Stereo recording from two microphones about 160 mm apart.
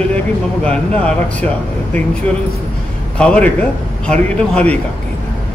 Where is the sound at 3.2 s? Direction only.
5° left (ahead or behind).